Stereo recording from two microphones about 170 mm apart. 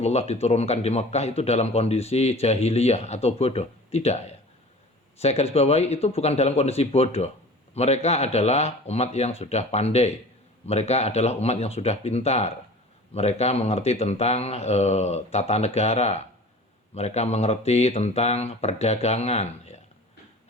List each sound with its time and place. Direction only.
0.0 s speech: 40° left (ahead or behind)